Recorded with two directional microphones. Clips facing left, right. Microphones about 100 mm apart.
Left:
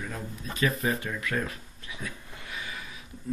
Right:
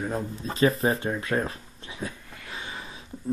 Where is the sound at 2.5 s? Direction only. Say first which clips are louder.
Right 2 dB; 30° right (ahead or behind).